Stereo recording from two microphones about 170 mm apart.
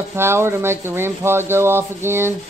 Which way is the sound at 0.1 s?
15° right (ahead or behind).